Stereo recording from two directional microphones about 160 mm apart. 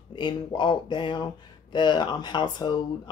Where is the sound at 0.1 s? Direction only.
30° left (ahead or behind).